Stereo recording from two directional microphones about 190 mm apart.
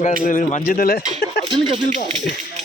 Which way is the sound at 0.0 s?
45° left (ahead or behind).